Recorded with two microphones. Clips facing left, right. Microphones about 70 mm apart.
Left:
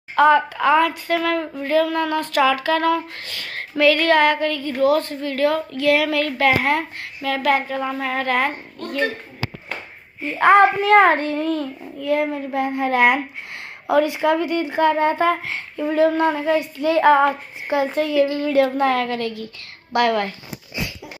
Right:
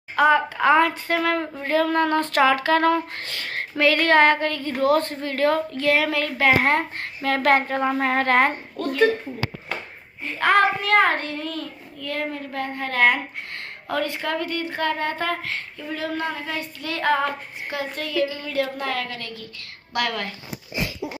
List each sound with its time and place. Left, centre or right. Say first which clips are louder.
0.1 s a woman's voice: left 3 dB; centre
0.7 s a sound: even; right
6.6 s a sound: even; right
10.2 s child singing: left 5 dB; left
12.0 s a child's voice: left 8 dB; centre
13.8 s child singing: left 8 dB; centre
15.8 s child singing: left 12 dB; left
18.2 s a sound: left 7 dB; left
19.9 s a child's voice: left 7 dB; centre